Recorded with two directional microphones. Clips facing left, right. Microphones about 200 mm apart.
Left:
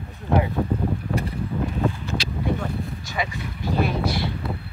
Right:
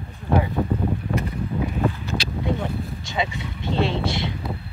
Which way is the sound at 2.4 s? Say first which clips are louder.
Even; 25° right (ahead or behind).